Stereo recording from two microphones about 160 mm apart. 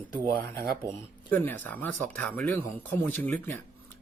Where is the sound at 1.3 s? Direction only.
10° left (ahead or behind).